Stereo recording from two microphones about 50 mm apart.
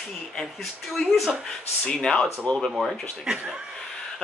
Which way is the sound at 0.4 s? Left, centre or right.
Centre.